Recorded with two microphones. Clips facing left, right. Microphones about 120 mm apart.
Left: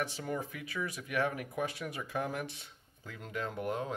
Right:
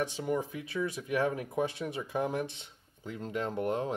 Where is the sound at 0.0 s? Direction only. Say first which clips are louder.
Right 5 dB; 20° right (ahead or behind).